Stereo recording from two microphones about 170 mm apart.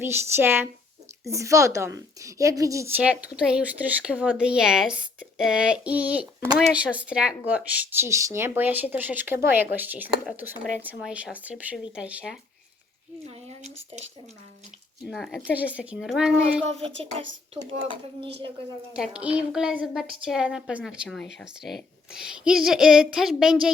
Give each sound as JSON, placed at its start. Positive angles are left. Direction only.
{"t": 0.0, "sound": "a woman's voice", "side_deg": -15}
{"t": 13.2, "sound": "speech", "side_deg": -40}
{"t": 15.0, "sound": "a woman's voice", "side_deg": 0}
{"t": 16.6, "sound": "a woman's voice", "side_deg": -40}
{"t": 18.9, "sound": "a woman's voice", "side_deg": -5}